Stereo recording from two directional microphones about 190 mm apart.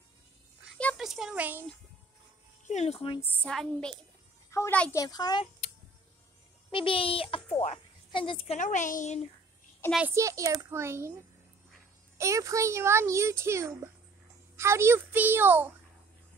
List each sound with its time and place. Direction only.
0.7 s a child's voice: centre (ahead or behind)
2.7 s a woman's voice: 35° left (ahead or behind)
3.2 s a woman's voice: 5° left (ahead or behind)
4.5 s a child's voice: 15° left (ahead or behind)
5.0 s a child's voice: 20° left (ahead or behind)
6.7 s a child's voice: 25° left (ahead or behind)
8.5 s a woman's voice: 40° left (ahead or behind)
9.9 s a child's voice: 10° right (ahead or behind)
12.2 s a child's voice: 15° right (ahead or behind)